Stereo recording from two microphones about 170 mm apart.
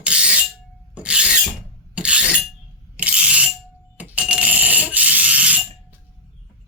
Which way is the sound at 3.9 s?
10° right (ahead or behind).